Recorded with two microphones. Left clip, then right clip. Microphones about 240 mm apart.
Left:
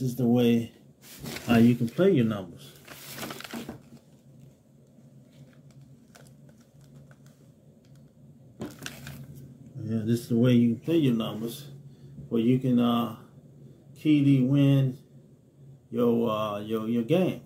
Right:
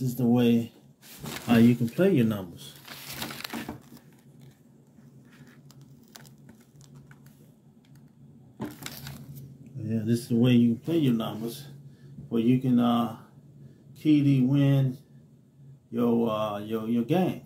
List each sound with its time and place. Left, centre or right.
0.0 s speech: centre
1.5 s speech: centre
2.1 s speech: right
9.8 s speech: centre
15.9 s speech: centre